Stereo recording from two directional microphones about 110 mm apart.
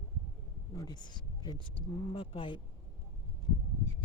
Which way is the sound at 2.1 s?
55° left (ahead or behind).